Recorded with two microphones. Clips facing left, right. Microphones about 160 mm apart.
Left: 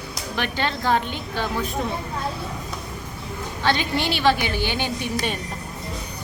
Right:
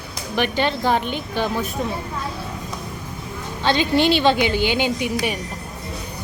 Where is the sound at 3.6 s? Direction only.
20° right (ahead or behind).